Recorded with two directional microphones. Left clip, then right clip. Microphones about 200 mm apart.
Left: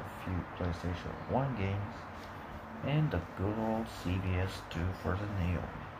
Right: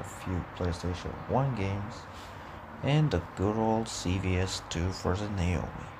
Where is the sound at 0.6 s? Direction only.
40° right (ahead or behind).